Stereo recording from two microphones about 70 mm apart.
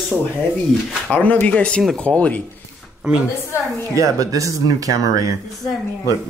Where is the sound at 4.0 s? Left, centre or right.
Right.